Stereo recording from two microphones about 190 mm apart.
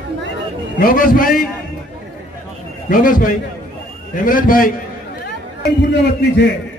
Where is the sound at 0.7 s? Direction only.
50° left (ahead or behind).